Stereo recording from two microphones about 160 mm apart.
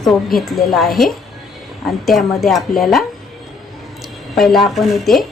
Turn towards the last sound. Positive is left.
turn(degrees=0)  # may be behind; listen again after turning